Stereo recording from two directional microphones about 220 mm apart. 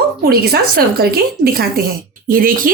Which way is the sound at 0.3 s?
45° right (ahead or behind).